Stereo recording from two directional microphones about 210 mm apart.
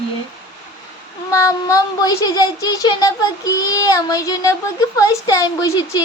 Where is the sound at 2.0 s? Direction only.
20° left (ahead or behind).